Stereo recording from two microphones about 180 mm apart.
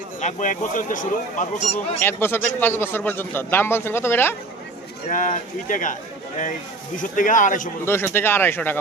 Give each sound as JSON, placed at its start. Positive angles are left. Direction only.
{"t": 0.2, "sound": "speech", "side_deg": 40}
{"t": 2.0, "sound": "a man's voice", "side_deg": 10}
{"t": 5.0, "sound": "speech", "side_deg": 45}
{"t": 7.0, "sound": "speech", "side_deg": 45}
{"t": 7.9, "sound": "a man's voice", "side_deg": 15}